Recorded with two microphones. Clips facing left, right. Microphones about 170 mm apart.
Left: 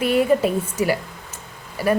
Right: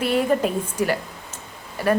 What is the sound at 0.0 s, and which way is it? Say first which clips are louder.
A woman's voice: left 3 dB; 10° left (ahead or behind).